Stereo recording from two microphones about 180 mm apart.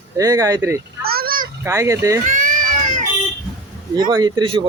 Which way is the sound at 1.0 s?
55° right (ahead or behind).